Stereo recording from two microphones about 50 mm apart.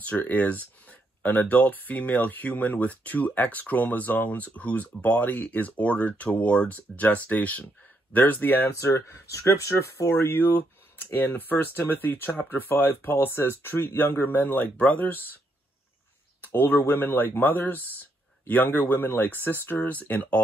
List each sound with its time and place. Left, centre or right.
0.0 s speech: left
9.1 s speech: left
10.1 s speech: left
16.3 s speech: left
19.8 s speech: left